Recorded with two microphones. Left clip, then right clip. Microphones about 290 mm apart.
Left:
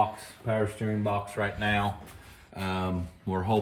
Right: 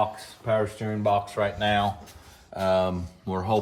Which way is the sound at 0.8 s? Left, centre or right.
Right.